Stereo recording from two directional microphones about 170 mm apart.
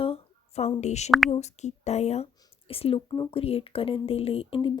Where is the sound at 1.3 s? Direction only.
40° left (ahead or behind).